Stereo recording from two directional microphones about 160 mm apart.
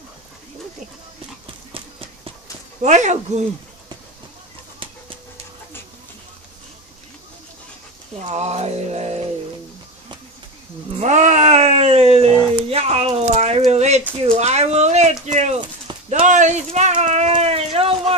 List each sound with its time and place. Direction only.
1.7 s clip-clop: 35° right (ahead or behind)
2.8 s music: 50° right (ahead or behind)
8.3 s music: 45° right (ahead or behind)
11.0 s speech: 45° right (ahead or behind)
14.2 s music: 40° right (ahead or behind)
17.0 s a sound: 45° right (ahead or behind)